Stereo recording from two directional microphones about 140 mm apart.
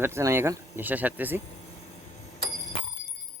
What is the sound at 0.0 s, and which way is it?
Speech, 20° right (ahead or behind).